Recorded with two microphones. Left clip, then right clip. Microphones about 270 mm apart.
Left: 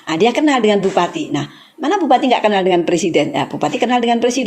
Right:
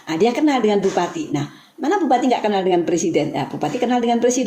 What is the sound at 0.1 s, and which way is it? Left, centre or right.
A woman's voice, left.